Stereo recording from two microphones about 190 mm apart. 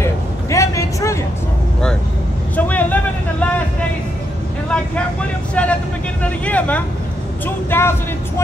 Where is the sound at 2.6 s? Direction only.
10° left (ahead or behind).